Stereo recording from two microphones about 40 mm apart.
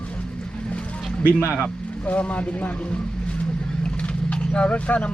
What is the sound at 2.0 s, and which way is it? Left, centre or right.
Speech, left.